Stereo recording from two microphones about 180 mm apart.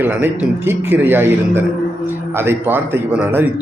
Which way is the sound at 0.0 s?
10° right (ahead or behind).